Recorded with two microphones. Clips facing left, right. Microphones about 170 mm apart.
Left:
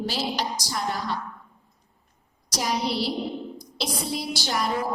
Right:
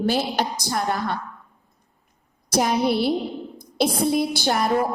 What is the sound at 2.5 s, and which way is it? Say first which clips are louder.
A woman's voice: right 7 dB; 55° right (ahead or behind).